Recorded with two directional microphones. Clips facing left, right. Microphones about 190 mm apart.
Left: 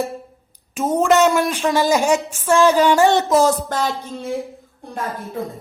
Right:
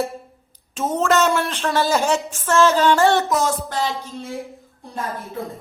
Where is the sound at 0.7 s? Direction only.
10° left (ahead or behind).